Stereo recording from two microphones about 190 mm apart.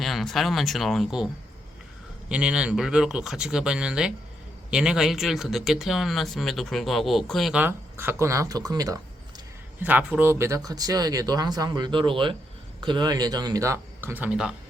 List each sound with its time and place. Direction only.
0.0 s speech: centre (ahead or behind)
2.3 s speech: 5° right (ahead or behind)
14.1 s speech: 10° right (ahead or behind)